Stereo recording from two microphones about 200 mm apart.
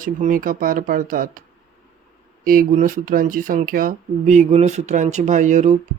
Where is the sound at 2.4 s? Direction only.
45° right (ahead or behind).